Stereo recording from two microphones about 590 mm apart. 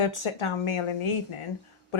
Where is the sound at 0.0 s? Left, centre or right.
Left.